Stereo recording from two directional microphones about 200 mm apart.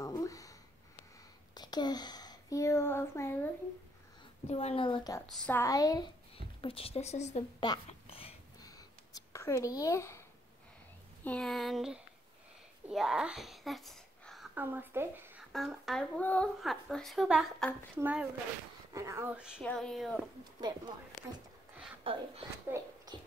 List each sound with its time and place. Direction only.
0.0 s a sound: 15° left (ahead or behind)
1.5 s speech: 20° left (ahead or behind)
4.5 s a woman's voice: 30° left (ahead or behind)
5.2 s a woman's voice: 5° left (ahead or behind)
6.6 s a woman's voice: 30° left (ahead or behind)
7.6 s a sound: 25° left (ahead or behind)
11.2 s a woman's voice: 5° left (ahead or behind)
15.5 s a woman's voice: centre (ahead or behind)
22.0 s speech: 25° right (ahead or behind)
22.7 s speech: 10° right (ahead or behind)